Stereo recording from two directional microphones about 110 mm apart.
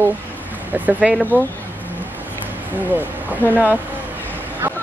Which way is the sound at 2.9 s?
15° right (ahead or behind).